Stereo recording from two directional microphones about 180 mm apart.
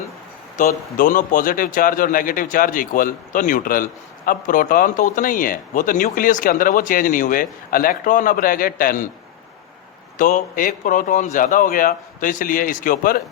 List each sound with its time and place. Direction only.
0.6 s speech: 45° left (ahead or behind)
10.2 s speech: 45° left (ahead or behind)